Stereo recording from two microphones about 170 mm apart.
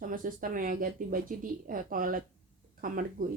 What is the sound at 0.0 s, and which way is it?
A woman's voice, 55° right (ahead or behind).